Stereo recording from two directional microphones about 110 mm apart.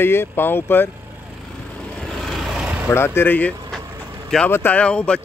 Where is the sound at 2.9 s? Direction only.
20° left (ahead or behind).